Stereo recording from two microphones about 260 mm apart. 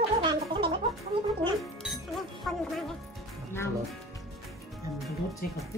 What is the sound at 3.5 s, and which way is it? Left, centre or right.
Speech, centre.